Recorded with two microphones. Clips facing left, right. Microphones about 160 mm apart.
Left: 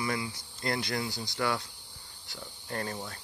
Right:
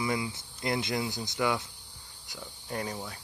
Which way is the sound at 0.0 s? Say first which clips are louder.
Right 2 dB; 20° right (ahead or behind).